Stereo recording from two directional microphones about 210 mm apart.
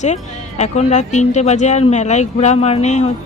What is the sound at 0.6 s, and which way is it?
Speech, 30° left (ahead or behind).